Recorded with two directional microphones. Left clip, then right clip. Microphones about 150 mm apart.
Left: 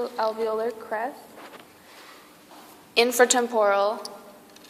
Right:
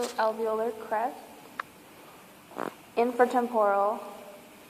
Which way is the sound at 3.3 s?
45° left (ahead or behind).